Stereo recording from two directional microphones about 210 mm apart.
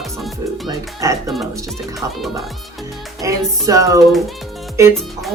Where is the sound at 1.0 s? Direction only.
15° right (ahead or behind).